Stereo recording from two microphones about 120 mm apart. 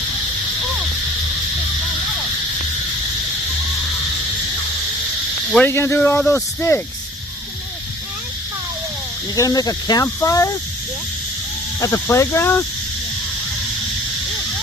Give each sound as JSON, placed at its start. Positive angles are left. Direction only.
{"t": 5.6, "sound": "speech", "side_deg": 20}
{"t": 9.3, "sound": "speech", "side_deg": 30}
{"t": 11.8, "sound": "speech", "side_deg": 25}